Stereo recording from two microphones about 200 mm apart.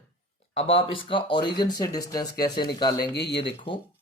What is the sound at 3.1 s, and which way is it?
Speech, 55° left (ahead or behind).